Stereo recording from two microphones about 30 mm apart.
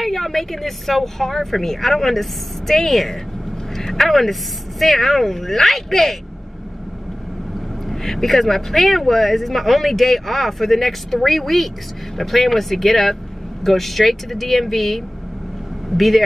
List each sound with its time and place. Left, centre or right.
0.0 s speech: centre
7.9 s speech: centre